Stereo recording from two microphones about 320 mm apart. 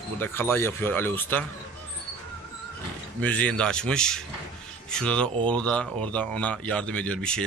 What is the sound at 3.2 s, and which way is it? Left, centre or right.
A man's voice, centre.